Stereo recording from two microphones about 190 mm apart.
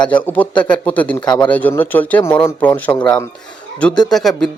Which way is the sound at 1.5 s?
10° left (ahead or behind).